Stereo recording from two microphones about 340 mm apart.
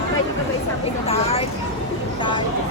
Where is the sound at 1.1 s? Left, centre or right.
Centre.